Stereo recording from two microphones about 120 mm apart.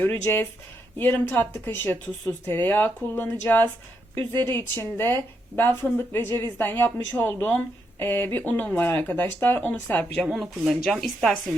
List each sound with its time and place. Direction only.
0.0 s speech: 20° left (ahead or behind); by 11.3 s centre (ahead or behind)